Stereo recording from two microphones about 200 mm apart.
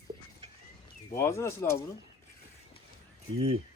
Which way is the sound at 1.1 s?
15° left (ahead or behind).